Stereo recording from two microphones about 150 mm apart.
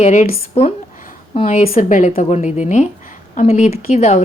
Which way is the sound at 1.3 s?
45° left (ahead or behind).